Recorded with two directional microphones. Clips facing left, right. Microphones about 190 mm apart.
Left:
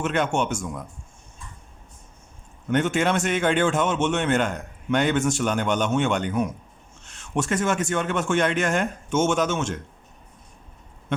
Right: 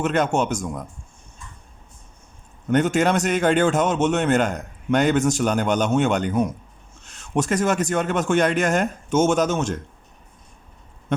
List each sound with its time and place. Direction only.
0.0 s speech: 40° right (ahead or behind)
2.6 s speech: 40° right (ahead or behind)